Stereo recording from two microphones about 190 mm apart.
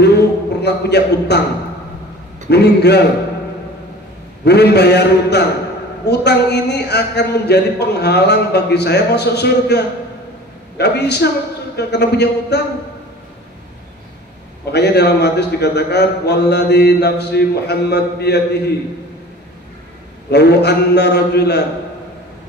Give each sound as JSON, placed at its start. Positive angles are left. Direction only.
{"t": 0.0, "sound": "a man's voice", "side_deg": 60}
{"t": 2.5, "sound": "a man's voice", "side_deg": 60}
{"t": 4.5, "sound": "a man's voice", "side_deg": 60}
{"t": 14.7, "sound": "a man's voice", "side_deg": 60}
{"t": 20.2, "sound": "a man's voice", "side_deg": 60}